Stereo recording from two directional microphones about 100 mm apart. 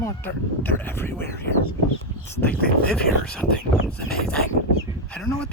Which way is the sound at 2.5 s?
10° left (ahead or behind).